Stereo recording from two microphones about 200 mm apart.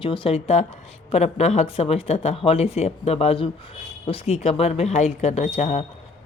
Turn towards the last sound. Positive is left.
turn(degrees=35)  # may be behind; listen again after turning